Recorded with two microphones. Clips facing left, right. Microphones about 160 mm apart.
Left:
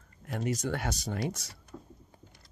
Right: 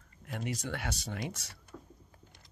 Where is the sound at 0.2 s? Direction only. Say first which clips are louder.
Left 5 dB; 40° left (ahead or behind).